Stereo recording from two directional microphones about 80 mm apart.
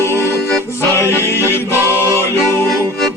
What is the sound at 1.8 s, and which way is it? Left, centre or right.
Music, right.